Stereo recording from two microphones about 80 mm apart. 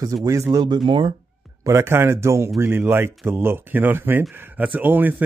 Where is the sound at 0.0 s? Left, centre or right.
Right.